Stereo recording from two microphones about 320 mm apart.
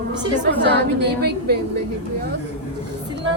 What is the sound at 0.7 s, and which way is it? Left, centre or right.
Speech, right.